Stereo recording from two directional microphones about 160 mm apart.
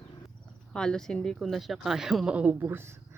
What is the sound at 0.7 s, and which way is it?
Speech, 5° left (ahead or behind).